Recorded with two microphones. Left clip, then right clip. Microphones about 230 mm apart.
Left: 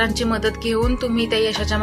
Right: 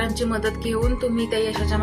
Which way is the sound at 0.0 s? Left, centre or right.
Left.